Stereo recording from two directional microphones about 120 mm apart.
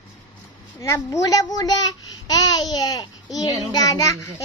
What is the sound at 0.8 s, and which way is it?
Speech, 25° left (ahead or behind).